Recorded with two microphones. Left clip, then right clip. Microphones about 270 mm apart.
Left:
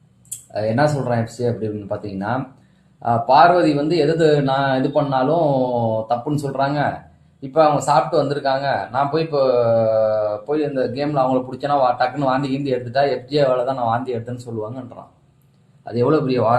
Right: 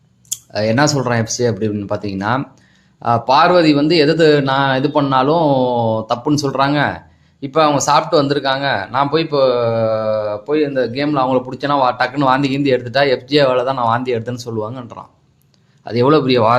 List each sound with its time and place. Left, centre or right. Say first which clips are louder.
0.5 s speech: right 3 dB; right
15.8 s speech: right 5 dB; right